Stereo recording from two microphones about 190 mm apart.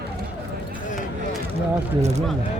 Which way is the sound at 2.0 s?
35° right (ahead or behind).